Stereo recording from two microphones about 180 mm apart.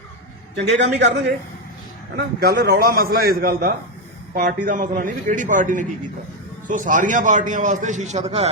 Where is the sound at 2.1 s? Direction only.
65° right (ahead or behind).